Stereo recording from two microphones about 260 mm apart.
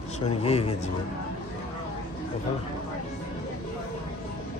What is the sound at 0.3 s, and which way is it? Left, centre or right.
Speech, left.